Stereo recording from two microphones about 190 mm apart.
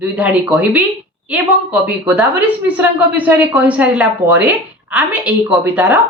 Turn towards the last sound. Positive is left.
turn(degrees=-10)  # may be behind; listen again after turning